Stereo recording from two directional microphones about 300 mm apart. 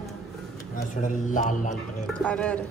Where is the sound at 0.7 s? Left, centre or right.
Left.